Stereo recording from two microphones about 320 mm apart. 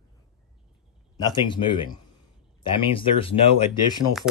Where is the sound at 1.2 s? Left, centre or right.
Centre.